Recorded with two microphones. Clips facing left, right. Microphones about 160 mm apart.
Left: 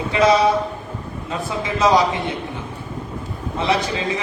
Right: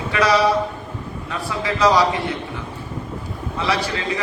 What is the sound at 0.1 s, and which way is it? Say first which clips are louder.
A man's voice: left 2 dB; 20° left (ahead or behind).